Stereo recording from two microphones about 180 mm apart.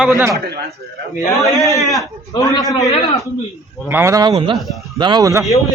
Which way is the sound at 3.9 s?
15° right (ahead or behind).